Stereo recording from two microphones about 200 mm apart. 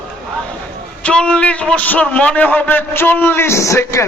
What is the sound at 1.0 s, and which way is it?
A man's voice, 5° left (ahead or behind).